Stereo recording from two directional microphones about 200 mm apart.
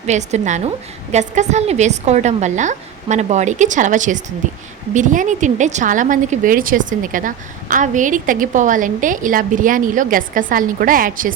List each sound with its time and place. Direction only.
0.0 s a woman's voice: 35° right (ahead or behind)